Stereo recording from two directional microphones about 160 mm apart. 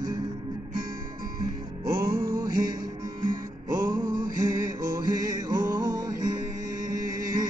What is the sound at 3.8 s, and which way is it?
Music, 60° right (ahead or behind).